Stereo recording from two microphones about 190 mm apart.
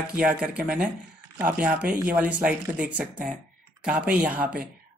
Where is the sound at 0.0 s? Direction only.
5° right (ahead or behind).